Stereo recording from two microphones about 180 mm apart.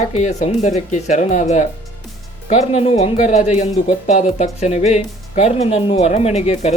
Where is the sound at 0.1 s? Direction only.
40° left (ahead or behind).